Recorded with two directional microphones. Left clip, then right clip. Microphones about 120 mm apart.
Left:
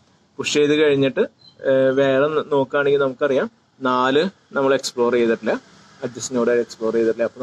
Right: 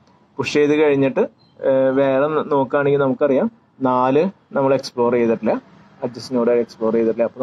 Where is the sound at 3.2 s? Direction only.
30° right (ahead or behind).